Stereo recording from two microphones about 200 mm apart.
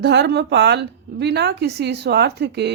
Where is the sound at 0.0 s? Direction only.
55° right (ahead or behind).